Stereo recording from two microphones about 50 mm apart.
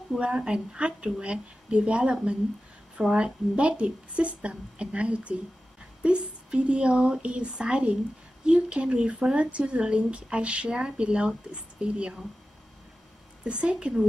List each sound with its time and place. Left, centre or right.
0.2 s speech: centre
13.4 s speech: right